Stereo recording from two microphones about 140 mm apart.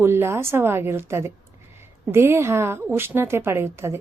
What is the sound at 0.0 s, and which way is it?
A woman's voice, 15° right (ahead or behind).